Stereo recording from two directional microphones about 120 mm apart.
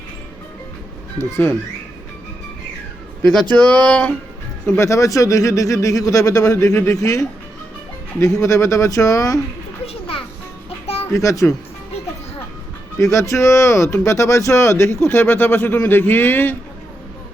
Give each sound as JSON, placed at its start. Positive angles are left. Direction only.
{"t": 1.2, "sound": "speech", "side_deg": 15}
{"t": 3.5, "sound": "speech", "side_deg": 10}
{"t": 4.8, "sound": "speech", "side_deg": 25}
{"t": 9.8, "sound": "children playing", "side_deg": 55}
{"t": 11.1, "sound": "speech", "side_deg": 25}
{"t": 13.0, "sound": "speech", "side_deg": 25}